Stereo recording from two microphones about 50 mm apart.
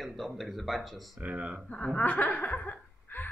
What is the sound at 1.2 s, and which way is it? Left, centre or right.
Speech, right.